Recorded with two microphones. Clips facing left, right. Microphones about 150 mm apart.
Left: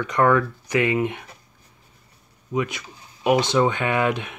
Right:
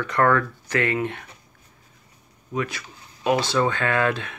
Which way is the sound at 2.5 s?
20° left (ahead or behind).